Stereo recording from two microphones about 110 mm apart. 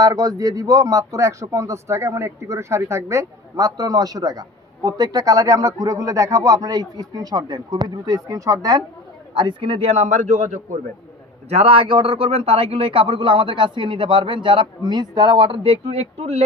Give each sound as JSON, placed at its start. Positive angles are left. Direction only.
{"t": 0.0, "sound": "speech", "side_deg": -30}
{"t": 9.3, "sound": "speech", "side_deg": -45}
{"t": 11.4, "sound": "a man's voice", "side_deg": -65}